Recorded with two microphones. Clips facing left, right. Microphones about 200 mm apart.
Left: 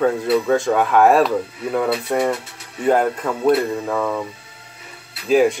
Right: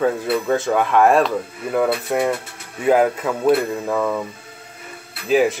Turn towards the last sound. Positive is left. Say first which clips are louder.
# left 2 dB
turn(degrees=0)  # may be behind; listen again after turning